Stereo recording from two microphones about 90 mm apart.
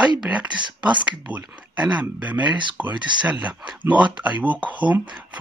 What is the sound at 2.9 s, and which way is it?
Speech, 55° right (ahead or behind).